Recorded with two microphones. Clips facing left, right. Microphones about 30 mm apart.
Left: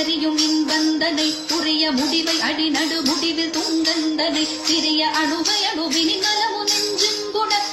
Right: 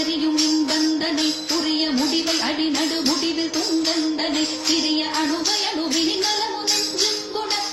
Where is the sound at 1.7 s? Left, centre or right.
Left.